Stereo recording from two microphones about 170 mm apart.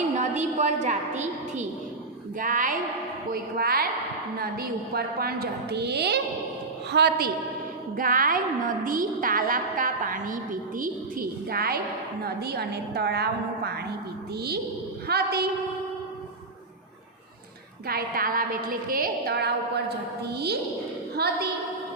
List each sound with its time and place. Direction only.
0.2 s a woman's voice: 45° right (ahead or behind); by 7.3 s 70° right (ahead or behind)
7.9 s a woman's voice: 55° right (ahead or behind)
17.8 s a woman's voice: 60° right (ahead or behind)